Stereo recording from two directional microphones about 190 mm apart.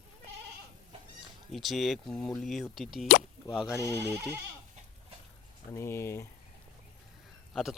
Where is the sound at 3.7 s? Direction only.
15° left (ahead or behind).